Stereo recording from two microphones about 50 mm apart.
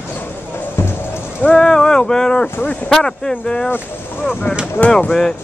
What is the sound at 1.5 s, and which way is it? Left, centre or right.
Boat, centre.